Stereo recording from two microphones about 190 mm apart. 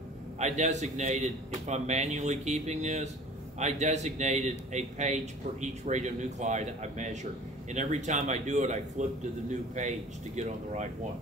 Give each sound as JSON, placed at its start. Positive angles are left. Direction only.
{"t": 0.4, "sound": "a man's voice", "side_deg": -35}